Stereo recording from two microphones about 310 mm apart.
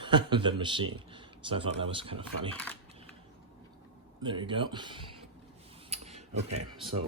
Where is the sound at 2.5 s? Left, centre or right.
Centre.